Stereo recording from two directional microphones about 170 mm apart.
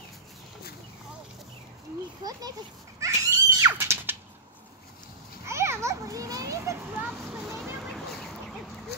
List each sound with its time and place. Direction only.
3.0 s screaming: 20° right (ahead or behind)
5.4 s children playing: 15° right (ahead or behind); by 8.4 s centre (ahead or behind)